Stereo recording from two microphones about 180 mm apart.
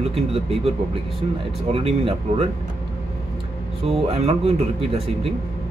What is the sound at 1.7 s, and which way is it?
Speech, 30° right (ahead or behind).